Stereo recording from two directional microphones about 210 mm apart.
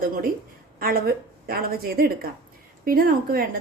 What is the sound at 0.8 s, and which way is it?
A woman's voice, 45° right (ahead or behind).